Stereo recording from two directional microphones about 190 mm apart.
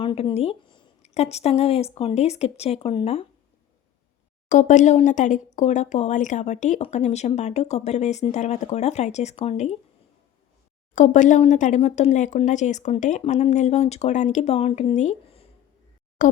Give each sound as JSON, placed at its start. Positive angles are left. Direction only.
{"t": 0.0, "sound": "speech", "side_deg": 25}
{"t": 4.4, "sound": "speech", "side_deg": 40}
{"t": 10.9, "sound": "speech", "side_deg": 40}
{"t": 16.2, "sound": "a sound", "side_deg": 45}